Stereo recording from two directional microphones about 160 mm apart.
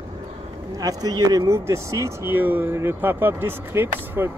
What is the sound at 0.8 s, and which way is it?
Speech, 25° right (ahead or behind).